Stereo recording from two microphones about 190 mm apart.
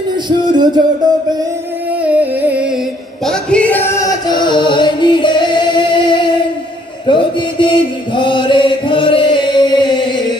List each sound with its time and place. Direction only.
0.5 s music: 25° right (ahead or behind)
2.0 s music: 5° right (ahead or behind)
3.3 s music: 5° left (ahead or behind); by 6.2 s 25° left (ahead or behind)
7.1 s chant: 25° left (ahead or behind)